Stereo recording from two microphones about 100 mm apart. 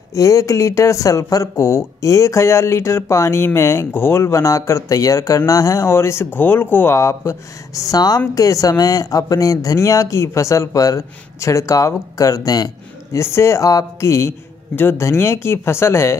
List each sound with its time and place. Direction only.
0.1 s speech: 30° left (ahead or behind)